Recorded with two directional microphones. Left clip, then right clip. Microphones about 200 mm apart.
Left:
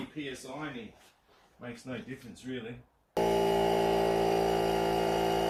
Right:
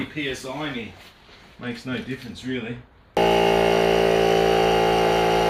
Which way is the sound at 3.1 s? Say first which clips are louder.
Right 9 dB; 20° left (ahead or behind).